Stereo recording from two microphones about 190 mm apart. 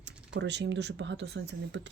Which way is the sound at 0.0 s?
65° right (ahead or behind).